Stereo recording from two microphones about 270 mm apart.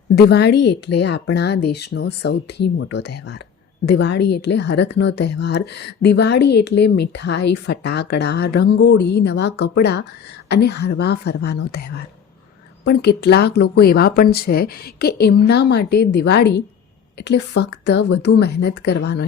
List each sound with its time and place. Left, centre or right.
0.2 s speech: left
12.8 s speech: left